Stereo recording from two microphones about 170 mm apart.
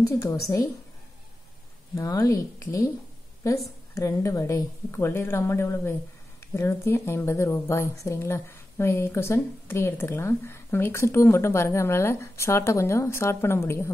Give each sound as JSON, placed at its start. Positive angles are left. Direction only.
{"t": 0.0, "sound": "a woman's voice", "side_deg": 20}
{"t": 2.0, "sound": "a woman's voice", "side_deg": 15}
{"t": 3.9, "sound": "a woman's voice", "side_deg": 20}